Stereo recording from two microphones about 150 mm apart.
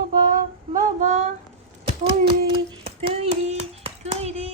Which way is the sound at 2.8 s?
40° right (ahead or behind).